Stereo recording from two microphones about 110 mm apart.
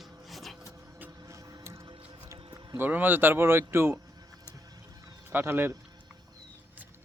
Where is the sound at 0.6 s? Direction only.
30° right (ahead or behind).